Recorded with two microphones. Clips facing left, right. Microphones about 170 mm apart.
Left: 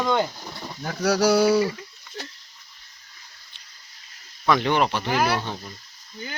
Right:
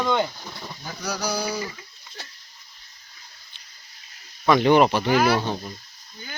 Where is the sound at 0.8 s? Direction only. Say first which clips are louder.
Left 10 dB; 75° left (ahead or behind).